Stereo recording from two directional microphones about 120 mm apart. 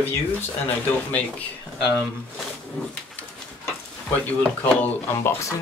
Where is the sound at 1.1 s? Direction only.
10° left (ahead or behind).